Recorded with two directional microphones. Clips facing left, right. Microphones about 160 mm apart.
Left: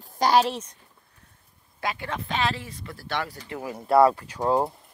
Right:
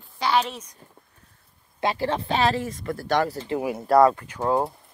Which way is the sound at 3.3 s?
25° right (ahead or behind).